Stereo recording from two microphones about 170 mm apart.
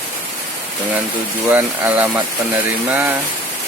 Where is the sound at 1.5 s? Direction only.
10° right (ahead or behind).